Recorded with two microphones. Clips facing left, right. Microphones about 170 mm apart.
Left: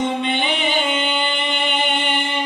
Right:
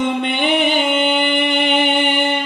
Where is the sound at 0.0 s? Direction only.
55° right (ahead or behind).